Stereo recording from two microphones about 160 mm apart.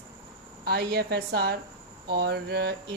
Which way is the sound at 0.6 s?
90° right.